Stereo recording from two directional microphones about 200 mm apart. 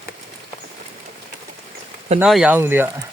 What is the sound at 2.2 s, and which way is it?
Speech, 5° right (ahead or behind).